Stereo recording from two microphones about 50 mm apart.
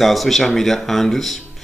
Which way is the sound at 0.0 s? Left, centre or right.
Centre.